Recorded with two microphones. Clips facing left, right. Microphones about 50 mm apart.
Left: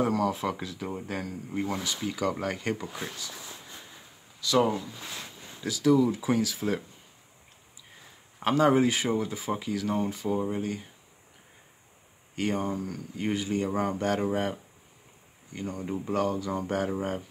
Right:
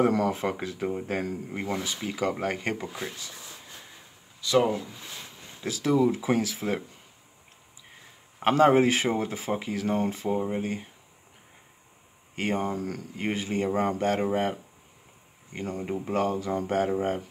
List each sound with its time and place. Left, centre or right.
0.0 s speech: right
4.5 s speech: right
5.6 s speech: right
8.4 s speech: right
12.4 s speech: right
12.7 s speech: right
13.1 s speech: right
15.6 s speech: right